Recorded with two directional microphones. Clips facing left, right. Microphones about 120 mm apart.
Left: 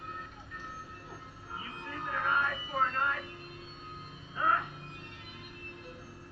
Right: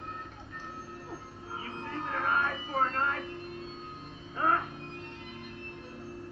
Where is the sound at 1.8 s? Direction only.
35° right (ahead or behind).